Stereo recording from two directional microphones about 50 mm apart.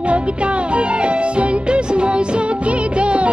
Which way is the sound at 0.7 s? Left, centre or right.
Right.